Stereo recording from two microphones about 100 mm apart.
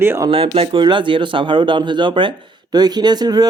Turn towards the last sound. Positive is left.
turn(degrees=-45)  # may be behind; listen again after turning